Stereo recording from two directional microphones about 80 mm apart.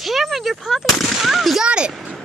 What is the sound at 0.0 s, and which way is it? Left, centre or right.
Gunshot, centre.